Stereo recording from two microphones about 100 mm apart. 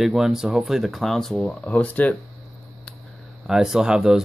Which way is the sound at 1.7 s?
15° left (ahead or behind).